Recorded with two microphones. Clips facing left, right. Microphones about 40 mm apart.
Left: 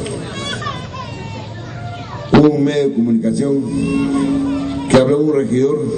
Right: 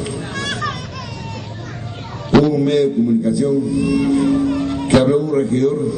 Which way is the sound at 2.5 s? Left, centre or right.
Centre.